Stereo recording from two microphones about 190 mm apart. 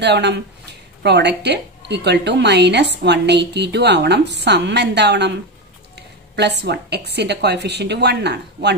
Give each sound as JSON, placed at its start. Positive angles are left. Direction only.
{"t": 0.0, "sound": "a woman's voice", "side_deg": -65}